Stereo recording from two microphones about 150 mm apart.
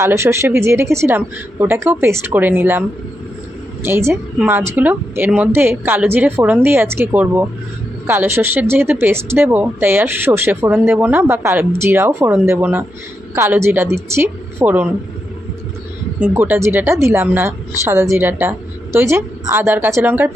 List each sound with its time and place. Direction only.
0.0 s speech: 15° right (ahead or behind)
3.8 s speech: 15° right (ahead or behind)
16.2 s speech: 15° right (ahead or behind)